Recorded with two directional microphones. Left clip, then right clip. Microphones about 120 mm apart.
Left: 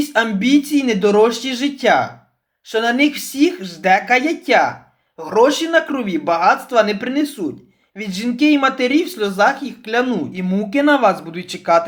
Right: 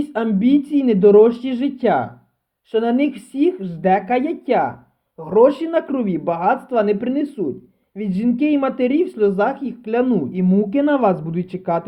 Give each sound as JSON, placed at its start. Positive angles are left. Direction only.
{"t": 0.0, "sound": "speech", "side_deg": -50}